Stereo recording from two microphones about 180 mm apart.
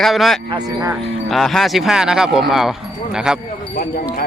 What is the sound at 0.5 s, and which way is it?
Speech, 20° right (ahead or behind).